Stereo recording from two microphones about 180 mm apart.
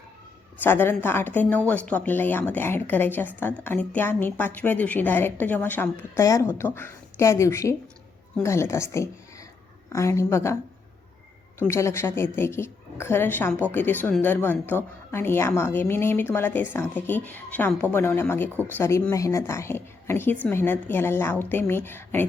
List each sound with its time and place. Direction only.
0.6 s a woman's voice: 10° left (ahead or behind)
11.6 s a woman's voice: 15° left (ahead or behind)